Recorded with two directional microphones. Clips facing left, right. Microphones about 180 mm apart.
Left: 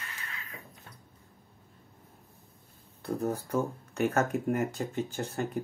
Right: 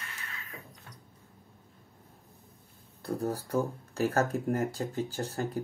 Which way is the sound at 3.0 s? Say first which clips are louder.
Left 1 dB; 35° right (ahead or behind).